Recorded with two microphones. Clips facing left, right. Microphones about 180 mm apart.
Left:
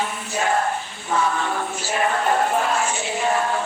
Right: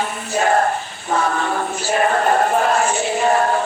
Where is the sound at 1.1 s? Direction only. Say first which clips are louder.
Right 3 dB; 45° right (ahead or behind).